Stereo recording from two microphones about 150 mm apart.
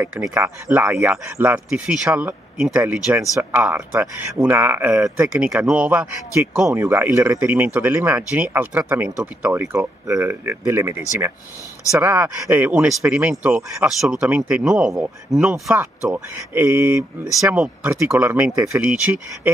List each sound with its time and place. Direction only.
0.3 s speech: 15° right (ahead or behind)
15.4 s speech: 15° right (ahead or behind)